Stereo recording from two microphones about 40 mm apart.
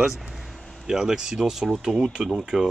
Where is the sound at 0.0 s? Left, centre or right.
Centre.